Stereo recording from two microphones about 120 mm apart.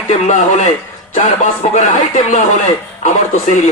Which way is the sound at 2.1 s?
80° left.